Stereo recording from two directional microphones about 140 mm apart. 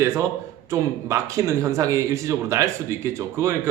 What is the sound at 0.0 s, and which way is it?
A man's voice, 20° right (ahead or behind).